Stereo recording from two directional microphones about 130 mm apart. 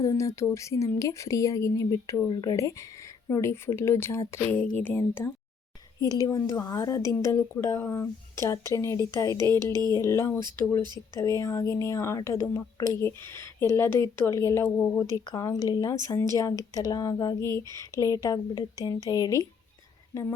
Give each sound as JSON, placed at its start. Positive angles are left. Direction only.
{"t": 0.0, "sound": "speech", "side_deg": 25}
{"t": 6.0, "sound": "speech", "side_deg": 30}
{"t": 10.8, "sound": "speech", "side_deg": -35}
{"t": 11.2, "sound": "speech", "side_deg": 25}
{"t": 15.1, "sound": "speech", "side_deg": 30}